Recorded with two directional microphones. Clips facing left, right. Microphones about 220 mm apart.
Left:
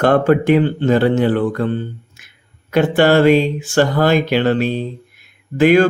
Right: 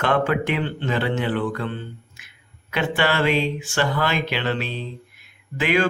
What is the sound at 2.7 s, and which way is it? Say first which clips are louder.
Mantra: left 10 dB; 45° left (ahead or behind).